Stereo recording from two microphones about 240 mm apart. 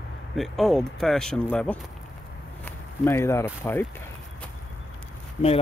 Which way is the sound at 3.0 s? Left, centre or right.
Centre.